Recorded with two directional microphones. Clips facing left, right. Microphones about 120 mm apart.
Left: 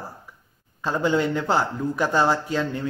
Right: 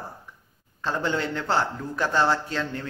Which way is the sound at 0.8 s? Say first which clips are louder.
Left 5 dB; 10° left (ahead or behind).